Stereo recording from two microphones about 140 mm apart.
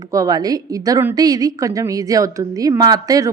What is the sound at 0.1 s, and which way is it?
A woman's voice, 25° right (ahead or behind).